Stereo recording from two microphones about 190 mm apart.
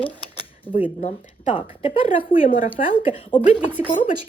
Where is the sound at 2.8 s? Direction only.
40° left (ahead or behind).